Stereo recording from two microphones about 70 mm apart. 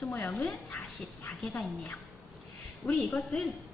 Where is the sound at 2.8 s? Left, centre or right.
Left.